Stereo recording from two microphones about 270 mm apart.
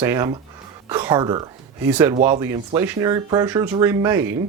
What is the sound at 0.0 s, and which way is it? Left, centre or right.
Speech, centre.